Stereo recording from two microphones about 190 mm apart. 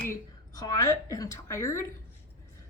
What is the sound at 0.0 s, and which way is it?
A woman's voice, 15° left (ahead or behind).